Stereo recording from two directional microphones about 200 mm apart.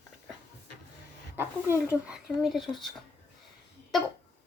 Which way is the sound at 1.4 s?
10° right (ahead or behind).